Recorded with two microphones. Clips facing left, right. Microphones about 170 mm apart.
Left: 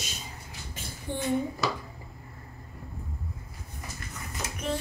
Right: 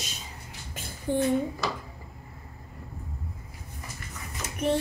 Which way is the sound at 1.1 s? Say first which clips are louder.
Right 8 dB; 40° right (ahead or behind).